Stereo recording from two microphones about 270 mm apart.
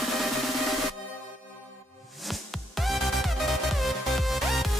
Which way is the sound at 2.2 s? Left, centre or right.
Centre.